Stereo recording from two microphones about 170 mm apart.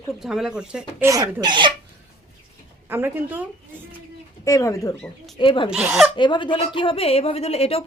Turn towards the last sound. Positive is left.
turn(degrees=35)  # may be behind; listen again after turning